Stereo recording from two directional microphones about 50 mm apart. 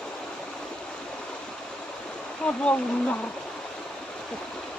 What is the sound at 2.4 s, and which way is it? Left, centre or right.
Speech, centre.